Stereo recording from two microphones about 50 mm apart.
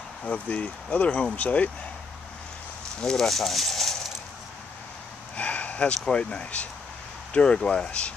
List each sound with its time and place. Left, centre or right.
0.2 s speech: left
3.0 s speech: centre
3.3 s speech: centre
5.3 s speech: left